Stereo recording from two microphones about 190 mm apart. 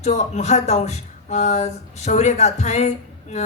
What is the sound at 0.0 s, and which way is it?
A woman's voice, 35° left (ahead or behind).